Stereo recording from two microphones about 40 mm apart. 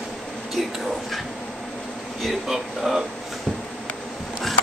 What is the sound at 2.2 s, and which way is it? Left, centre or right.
Speech, centre.